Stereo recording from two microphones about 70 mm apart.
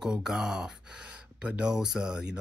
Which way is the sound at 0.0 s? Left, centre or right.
Centre.